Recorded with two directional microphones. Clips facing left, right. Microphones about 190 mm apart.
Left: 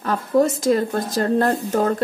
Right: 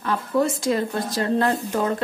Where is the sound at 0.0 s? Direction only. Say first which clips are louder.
Left 4 dB; 45° left (ahead or behind).